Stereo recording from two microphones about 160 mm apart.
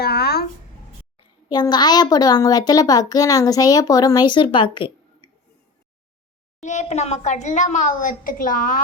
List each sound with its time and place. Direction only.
0.0 s a sound: 80° left
1.5 s a child's voice: 25° left (ahead or behind)
6.6 s a woman's voice: 45° left (ahead or behind)